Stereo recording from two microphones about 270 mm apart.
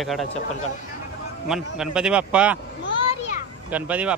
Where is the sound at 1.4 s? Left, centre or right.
Centre.